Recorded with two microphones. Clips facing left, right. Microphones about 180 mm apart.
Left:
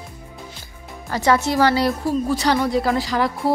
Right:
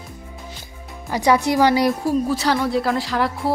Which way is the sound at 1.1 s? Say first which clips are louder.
Right 1 dB; 15° right (ahead or behind).